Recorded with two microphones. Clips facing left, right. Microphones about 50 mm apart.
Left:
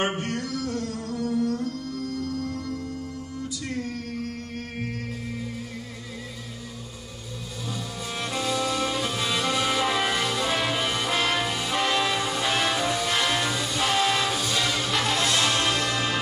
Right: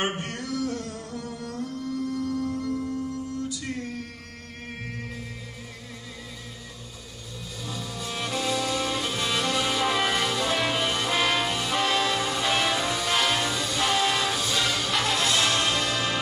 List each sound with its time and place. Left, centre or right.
0.2 s a sound: centre
0.7 s music: right
1.1 s music: centre
7.7 s music: centre